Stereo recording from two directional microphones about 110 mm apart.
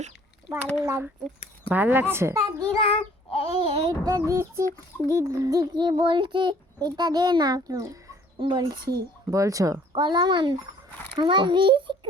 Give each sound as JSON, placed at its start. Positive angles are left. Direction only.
{"t": 0.8, "sound": "speech", "side_deg": -25}
{"t": 2.7, "sound": "child singing", "side_deg": 60}
{"t": 3.6, "sound": "a sound", "side_deg": -60}
{"t": 3.8, "sound": "a child's voice", "side_deg": -35}
{"t": 6.0, "sound": "a child's voice", "side_deg": -50}
{"t": 8.4, "sound": "a child's voice", "side_deg": -45}
{"t": 9.2, "sound": "a child's voice", "side_deg": -30}
{"t": 9.9, "sound": "a child's voice", "side_deg": -40}